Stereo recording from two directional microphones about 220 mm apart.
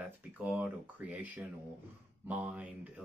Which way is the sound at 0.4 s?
5° right (ahead or behind).